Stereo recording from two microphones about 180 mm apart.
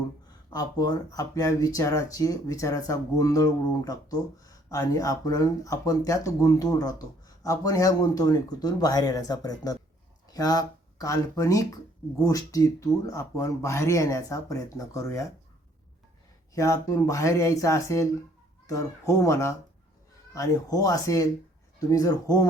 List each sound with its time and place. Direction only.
0.5 s speech: 20° left (ahead or behind)
16.6 s speech: 20° left (ahead or behind)